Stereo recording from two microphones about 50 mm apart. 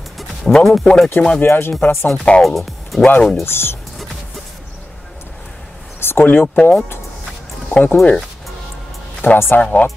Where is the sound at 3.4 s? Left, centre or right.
Left.